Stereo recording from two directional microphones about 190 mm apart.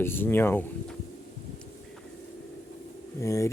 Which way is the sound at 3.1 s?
15° left (ahead or behind).